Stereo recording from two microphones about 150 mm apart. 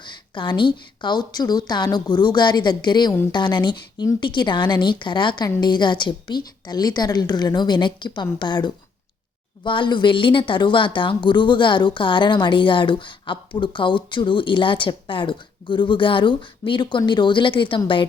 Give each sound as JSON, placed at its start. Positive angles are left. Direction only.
{"t": 0.0, "sound": "a woman's voice", "side_deg": 30}